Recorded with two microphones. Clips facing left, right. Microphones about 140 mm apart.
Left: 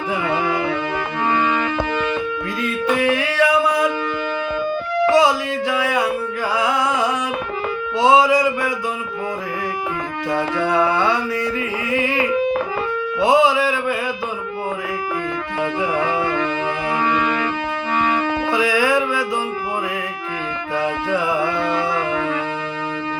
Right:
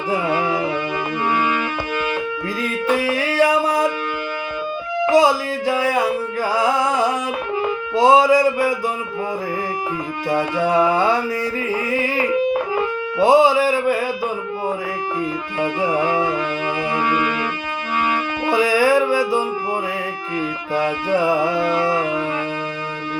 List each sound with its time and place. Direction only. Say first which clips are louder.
1.3 s music: left 2 dB; 10° right (ahead or behind)
2.6 s music: left 1 dB; 40° right (ahead or behind)
5.1 s music: right 3 dB; 40° right (ahead or behind)
7.9 s a sound: right 1 dB; 40° right (ahead or behind)
10.2 s music: right 1 dB; 15° right (ahead or behind)
10.8 s mantra: right 2 dB; 40° right (ahead or behind)
11.9 s music: left 4 dB; 40° right (ahead or behind)
13.1 s a sound: right 2 dB; 40° right (ahead or behind)
15.9 s music: right 1 dB; 10° right (ahead or behind)
18.5 s music: right 4 dB; 40° right (ahead or behind)
20.7 s music: right 2 dB; 40° right (ahead or behind)